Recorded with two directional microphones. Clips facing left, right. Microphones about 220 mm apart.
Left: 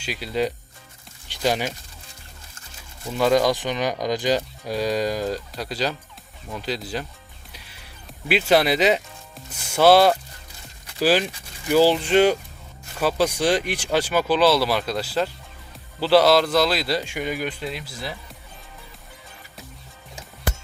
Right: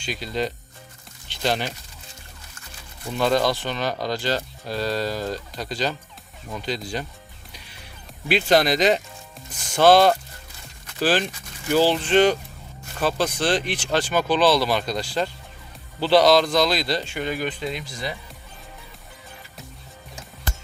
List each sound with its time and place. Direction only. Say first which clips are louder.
0.0 s speech: left 2 dB; 5° left (ahead or behind)
3.2 s a man's voice: left 2 dB; 10° left (ahead or behind)
8.3 s a man's voice: even; 5° left (ahead or behind)